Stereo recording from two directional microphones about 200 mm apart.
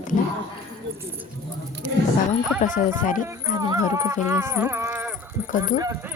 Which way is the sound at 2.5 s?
40° left (ahead or behind).